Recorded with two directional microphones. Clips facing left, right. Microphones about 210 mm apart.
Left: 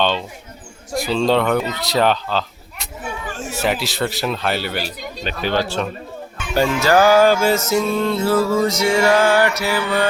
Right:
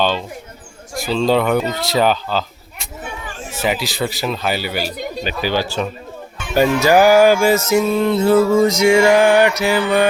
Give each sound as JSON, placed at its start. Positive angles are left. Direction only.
{"t": 0.9, "sound": "speech", "side_deg": 0}
{"t": 3.6, "sound": "speech", "side_deg": 0}
{"t": 6.5, "sound": "music", "side_deg": -15}